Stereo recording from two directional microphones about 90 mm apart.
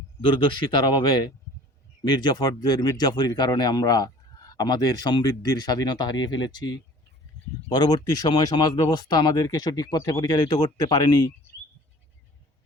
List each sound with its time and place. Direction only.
0.2 s speech: 60° left (ahead or behind)
10.0 s speech: 35° left (ahead or behind)
10.2 s speech: 50° left (ahead or behind)